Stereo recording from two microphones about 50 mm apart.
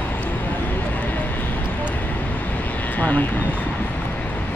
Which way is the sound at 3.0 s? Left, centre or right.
Left.